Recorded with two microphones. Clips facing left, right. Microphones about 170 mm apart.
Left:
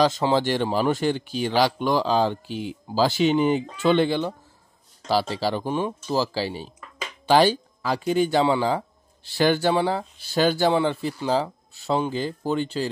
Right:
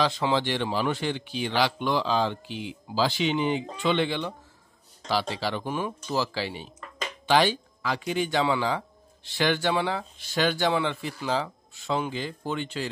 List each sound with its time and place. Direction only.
0.0 s speech: 40° left (ahead or behind)
5.3 s speech: 35° left (ahead or behind)